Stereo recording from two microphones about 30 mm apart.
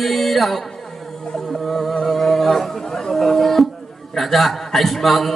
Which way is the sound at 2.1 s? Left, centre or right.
Centre.